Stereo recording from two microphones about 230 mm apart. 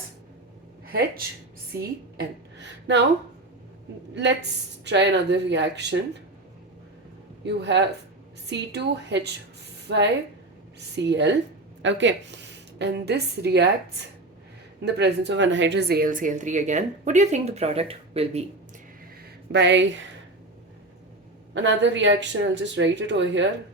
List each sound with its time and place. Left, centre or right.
0.9 s speech: right
1.7 s a woman's voice: centre
2.1 s speech: right
4.1 s speech: right
7.4 s a woman's voice: right
14.8 s a woman's voice: right
19.5 s speech: right
21.5 s speech: right